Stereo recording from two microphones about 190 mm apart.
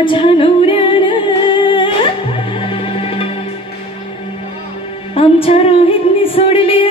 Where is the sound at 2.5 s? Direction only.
30° left (ahead or behind).